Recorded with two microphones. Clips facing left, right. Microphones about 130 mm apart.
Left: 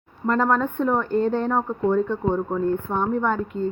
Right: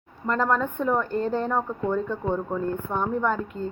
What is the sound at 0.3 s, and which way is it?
Speech, centre (ahead or behind).